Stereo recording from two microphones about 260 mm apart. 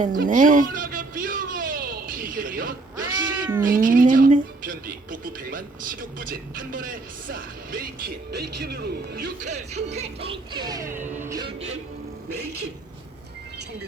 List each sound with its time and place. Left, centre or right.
0.0 s a sound: right
3.2 s cat: centre
3.6 s a woman's voice: right; by 11.0 s centre
11.3 s music: centre